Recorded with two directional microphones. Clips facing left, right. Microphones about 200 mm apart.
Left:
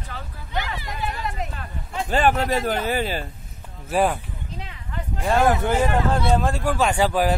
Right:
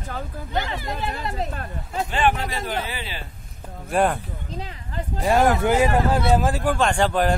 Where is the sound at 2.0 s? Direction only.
40° left (ahead or behind).